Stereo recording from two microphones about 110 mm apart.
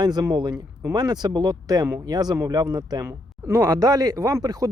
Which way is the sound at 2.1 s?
40° right (ahead or behind).